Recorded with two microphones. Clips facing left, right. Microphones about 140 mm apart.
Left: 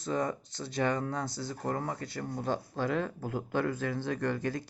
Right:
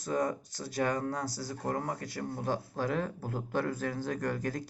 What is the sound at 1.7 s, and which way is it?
Speech, 45° right (ahead or behind).